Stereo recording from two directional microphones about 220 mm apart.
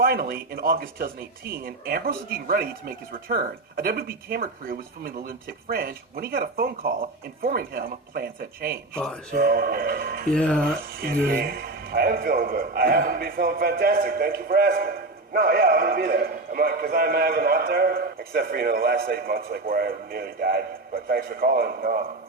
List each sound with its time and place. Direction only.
0.0 s a man's voice: 45° right (ahead or behind)
10.3 s speech: 5° left (ahead or behind)
10.9 s a man's voice: 40° right (ahead or behind)